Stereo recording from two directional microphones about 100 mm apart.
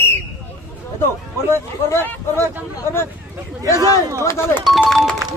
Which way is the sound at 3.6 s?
35° right (ahead or behind).